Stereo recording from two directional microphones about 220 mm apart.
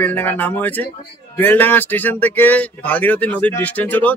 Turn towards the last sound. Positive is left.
turn(degrees=5)  # may be behind; listen again after turning